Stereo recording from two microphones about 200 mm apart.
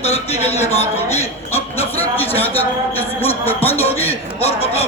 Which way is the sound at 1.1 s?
10° left (ahead or behind).